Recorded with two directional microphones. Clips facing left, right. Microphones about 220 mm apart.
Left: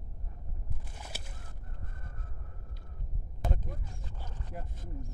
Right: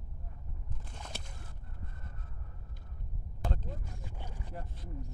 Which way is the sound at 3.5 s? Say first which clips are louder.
Left 1 dB; 15° left (ahead or behind).